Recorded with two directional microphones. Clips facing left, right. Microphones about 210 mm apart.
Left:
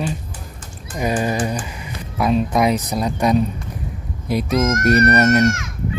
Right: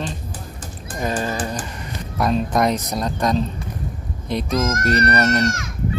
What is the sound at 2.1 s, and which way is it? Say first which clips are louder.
Speech: left 2 dB; 5° left (ahead or behind).